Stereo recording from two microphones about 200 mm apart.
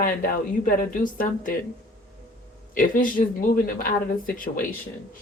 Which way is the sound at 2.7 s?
45° left (ahead or behind).